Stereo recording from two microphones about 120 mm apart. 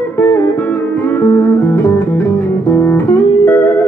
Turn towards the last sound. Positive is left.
turn(degrees=20)  # may be behind; listen again after turning